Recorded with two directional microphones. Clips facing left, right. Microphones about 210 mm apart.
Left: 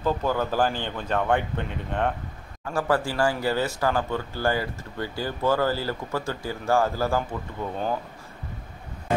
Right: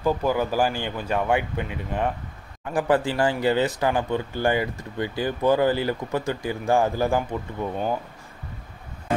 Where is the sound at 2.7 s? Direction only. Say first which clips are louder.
Right 3 dB; 20° right (ahead or behind).